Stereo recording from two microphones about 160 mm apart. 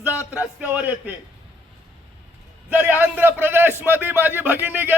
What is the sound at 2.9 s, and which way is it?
A man's voice, 10° right (ahead or behind).